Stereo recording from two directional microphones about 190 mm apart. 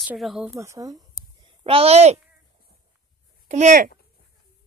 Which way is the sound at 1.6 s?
30° right (ahead or behind).